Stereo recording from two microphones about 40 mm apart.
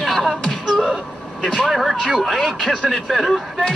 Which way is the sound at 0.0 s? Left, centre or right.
Centre.